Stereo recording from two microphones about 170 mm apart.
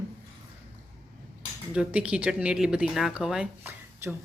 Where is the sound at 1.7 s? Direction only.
5° right (ahead or behind).